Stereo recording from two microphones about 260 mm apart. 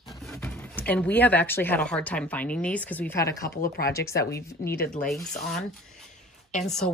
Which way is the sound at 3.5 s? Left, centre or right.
Left.